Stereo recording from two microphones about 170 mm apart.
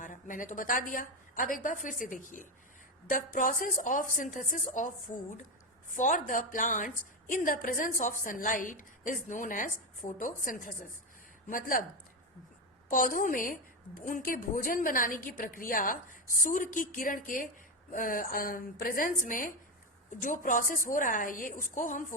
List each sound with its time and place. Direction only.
0.0 s a woman's voice: 50° left (ahead or behind)
5.9 s a woman's voice: 50° left (ahead or behind)
12.9 s a woman's voice: 55° left (ahead or behind)